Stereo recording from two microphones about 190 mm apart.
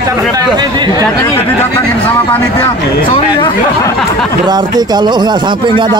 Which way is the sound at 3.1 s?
20° left (ahead or behind).